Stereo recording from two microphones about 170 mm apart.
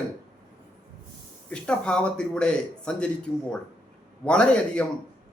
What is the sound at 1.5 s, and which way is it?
A man's voice, 5° left (ahead or behind).